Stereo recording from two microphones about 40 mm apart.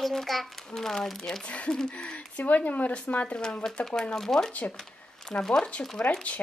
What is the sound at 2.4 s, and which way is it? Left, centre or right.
Speech, left.